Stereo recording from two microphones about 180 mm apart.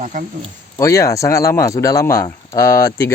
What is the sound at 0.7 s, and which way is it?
Speech, 20° left (ahead or behind).